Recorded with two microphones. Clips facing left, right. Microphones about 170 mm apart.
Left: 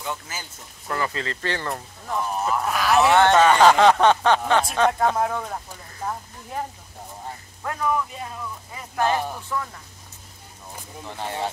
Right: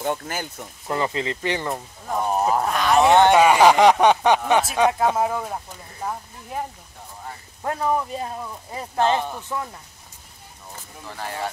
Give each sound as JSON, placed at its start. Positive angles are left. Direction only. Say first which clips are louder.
{"t": 0.0, "sound": "speech", "louder": "right 7 dB", "side_deg": -55}
{"t": 0.8, "sound": "speech", "louder": "right 3 dB", "side_deg": -20}
{"t": 2.3, "sound": "speech", "louder": "right 5 dB", "side_deg": -40}
{"t": 2.7, "sound": "a sound", "louder": "even", "side_deg": 5}
{"t": 3.1, "sound": "speech", "louder": "right 2 dB", "side_deg": -15}
{"t": 7.6, "sound": "speech", "louder": "right 2 dB", "side_deg": -30}
{"t": 11.1, "sound": "speech", "louder": "left 1 dB", "side_deg": 20}